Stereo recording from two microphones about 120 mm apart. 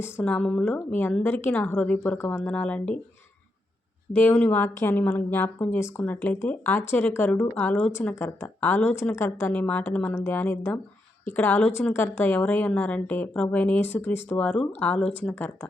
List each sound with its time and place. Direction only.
0.0 s speech: 10° left (ahead or behind)
2.5 s speech: 10° left (ahead or behind)
4.1 s speech: 10° left (ahead or behind)